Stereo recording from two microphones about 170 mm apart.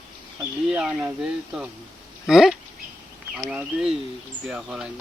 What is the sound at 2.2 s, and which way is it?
Speech, centre (ahead or behind).